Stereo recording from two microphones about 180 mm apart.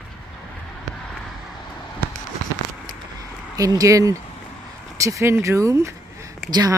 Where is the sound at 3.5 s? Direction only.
20° right (ahead or behind).